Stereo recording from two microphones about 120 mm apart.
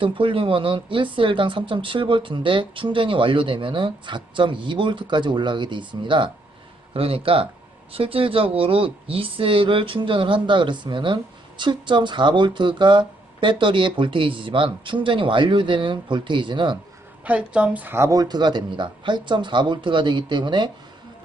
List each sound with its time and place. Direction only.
0.0 s a woman's voice: 45° right (ahead or behind)
17.2 s speech: 10° right (ahead or behind); by 20.7 s 40° right (ahead or behind)